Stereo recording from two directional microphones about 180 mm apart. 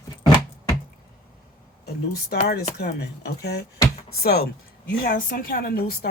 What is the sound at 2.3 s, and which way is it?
A woman's voice, 65° left (ahead or behind).